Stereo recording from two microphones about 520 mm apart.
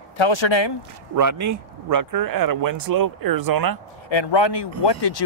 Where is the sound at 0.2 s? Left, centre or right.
Left.